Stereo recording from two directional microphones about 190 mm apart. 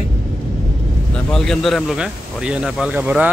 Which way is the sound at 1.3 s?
Centre (ahead or behind).